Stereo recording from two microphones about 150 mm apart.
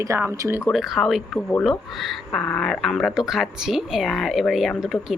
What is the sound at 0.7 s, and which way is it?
Speech, centre (ahead or behind).